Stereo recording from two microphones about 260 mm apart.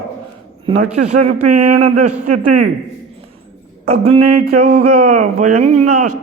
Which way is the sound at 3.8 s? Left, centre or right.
Right.